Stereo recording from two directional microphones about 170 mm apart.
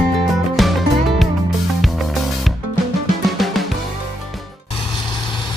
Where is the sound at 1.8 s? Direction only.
Centre (ahead or behind).